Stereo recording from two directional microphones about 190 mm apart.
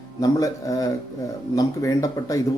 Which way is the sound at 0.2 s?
20° left (ahead or behind).